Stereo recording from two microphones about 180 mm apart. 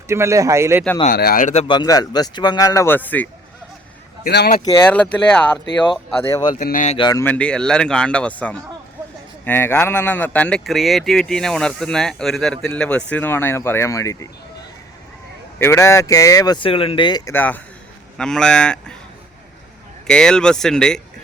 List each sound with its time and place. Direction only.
0.1 s speech: 15° right (ahead or behind)
1.0 s speech: 55° left (ahead or behind)
1.6 s speech: 25° left (ahead or behind)
4.2 s speech: 60° left (ahead or behind)
5.1 s speech: 5° left (ahead or behind)
6.2 s speech: 20° left (ahead or behind)
6.6 s speech: 45° left (ahead or behind)
6.9 s speech: 25° left (ahead or behind)
15.5 s speech: 15° left (ahead or behind)
17.3 s speech: 10° left (ahead or behind)
20.1 s speech: 5° left (ahead or behind)